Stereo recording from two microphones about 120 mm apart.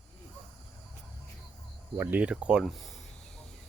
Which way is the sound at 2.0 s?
15° right (ahead or behind).